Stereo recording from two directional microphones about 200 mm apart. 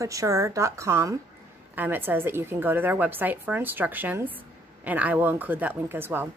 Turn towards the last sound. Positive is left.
turn(degrees=-10)  # may be behind; listen again after turning